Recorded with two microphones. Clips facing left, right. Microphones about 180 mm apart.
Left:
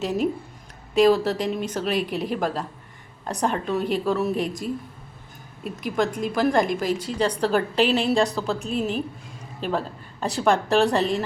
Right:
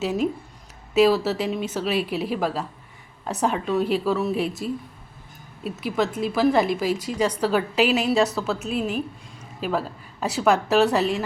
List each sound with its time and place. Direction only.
0.9 s a woman's voice: 5° right (ahead or behind)
5.7 s a woman's voice: 5° right (ahead or behind)